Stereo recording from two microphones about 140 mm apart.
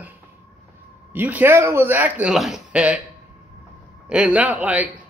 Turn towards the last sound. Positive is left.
turn(degrees=-10)  # may be behind; listen again after turning